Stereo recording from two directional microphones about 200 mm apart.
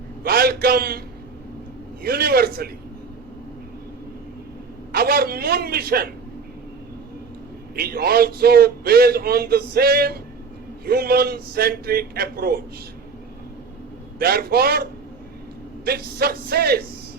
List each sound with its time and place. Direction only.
0.2 s a man's voice: 50° right (ahead or behind)
4.9 s a man's voice: 50° right (ahead or behind)
7.8 s a man's voice: 50° right (ahead or behind)
14.2 s a man's voice: 50° right (ahead or behind)